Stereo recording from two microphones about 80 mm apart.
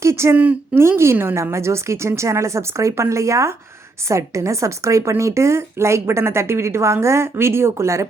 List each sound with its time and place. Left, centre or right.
0.0 s a sound: right
0.3 s a woman's voice: centre
0.8 s a woman's voice: right